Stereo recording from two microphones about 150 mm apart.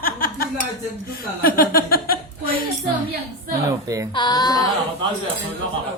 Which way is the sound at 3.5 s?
20° right (ahead or behind).